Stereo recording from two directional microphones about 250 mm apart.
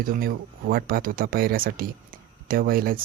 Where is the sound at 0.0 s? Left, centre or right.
Right.